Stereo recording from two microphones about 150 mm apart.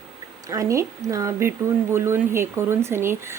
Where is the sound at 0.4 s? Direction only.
20° right (ahead or behind).